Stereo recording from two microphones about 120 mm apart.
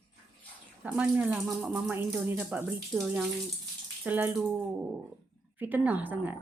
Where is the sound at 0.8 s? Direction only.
10° right (ahead or behind).